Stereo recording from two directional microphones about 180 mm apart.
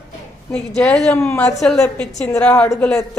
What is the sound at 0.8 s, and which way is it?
Speech, 5° left (ahead or behind).